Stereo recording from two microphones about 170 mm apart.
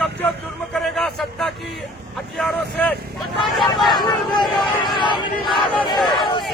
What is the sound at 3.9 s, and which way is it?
Vehicle, 25° left (ahead or behind).